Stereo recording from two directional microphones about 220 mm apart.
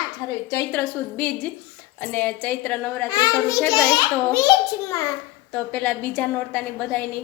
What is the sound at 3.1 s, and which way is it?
A woman's voice, 15° left (ahead or behind).